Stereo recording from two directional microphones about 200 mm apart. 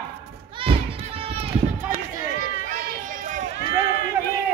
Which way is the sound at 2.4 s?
40° right (ahead or behind).